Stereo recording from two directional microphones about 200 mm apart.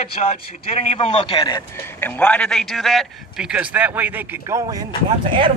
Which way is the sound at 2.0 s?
10° left (ahead or behind).